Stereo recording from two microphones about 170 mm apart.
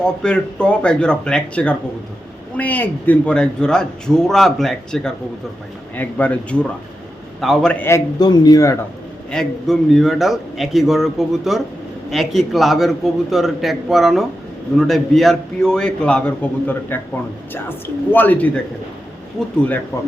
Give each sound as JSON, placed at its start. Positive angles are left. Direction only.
{"t": 0.0, "sound": "a man's voice", "side_deg": 5}
{"t": 9.3, "sound": "a man's voice", "side_deg": 0}